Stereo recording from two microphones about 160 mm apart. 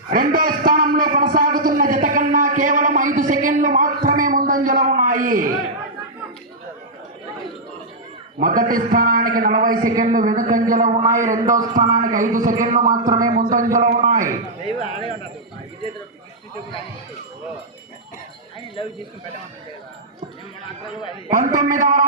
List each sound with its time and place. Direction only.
0.1 s a sound: 65° right (ahead or behind)
8.4 s a man's voice: 60° right (ahead or behind)
14.8 s speech: 35° left (ahead or behind)
18.8 s speech: 35° left (ahead or behind)
21.2 s a man's voice: 55° right (ahead or behind)